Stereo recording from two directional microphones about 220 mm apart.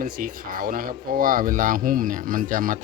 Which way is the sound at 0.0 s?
40° right (ahead or behind).